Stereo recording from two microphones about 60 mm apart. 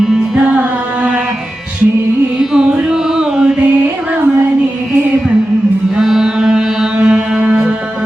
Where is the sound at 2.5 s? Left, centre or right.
Centre.